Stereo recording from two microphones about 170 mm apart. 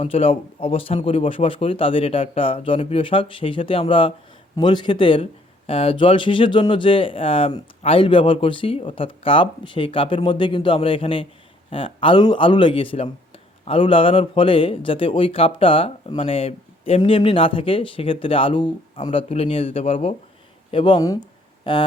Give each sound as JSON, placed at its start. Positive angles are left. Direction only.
{"t": 0.0, "sound": "a man's voice", "side_deg": 35}